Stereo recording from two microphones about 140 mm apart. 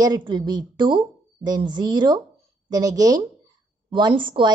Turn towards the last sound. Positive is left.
turn(degrees=-35)  # may be behind; listen again after turning